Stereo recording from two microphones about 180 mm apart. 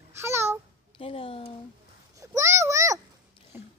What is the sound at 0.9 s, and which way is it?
Speech, 30° left (ahead or behind).